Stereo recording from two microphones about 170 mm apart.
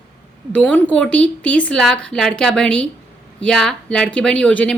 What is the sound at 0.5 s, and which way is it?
A woman's voice, 5° left (ahead or behind).